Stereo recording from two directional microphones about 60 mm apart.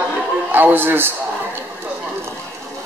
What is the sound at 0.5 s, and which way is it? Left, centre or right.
Speech, right.